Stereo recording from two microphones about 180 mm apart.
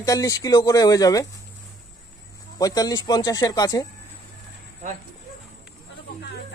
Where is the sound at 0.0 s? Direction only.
20° left (ahead or behind).